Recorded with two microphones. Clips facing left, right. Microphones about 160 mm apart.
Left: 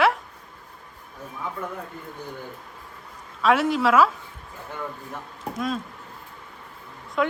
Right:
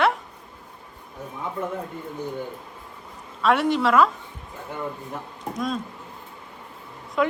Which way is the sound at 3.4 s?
Centre (ahead or behind).